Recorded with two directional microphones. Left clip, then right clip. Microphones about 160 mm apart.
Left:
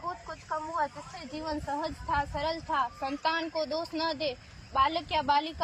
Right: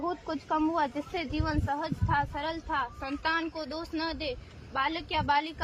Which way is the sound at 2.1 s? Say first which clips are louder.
Even; 15° left (ahead or behind).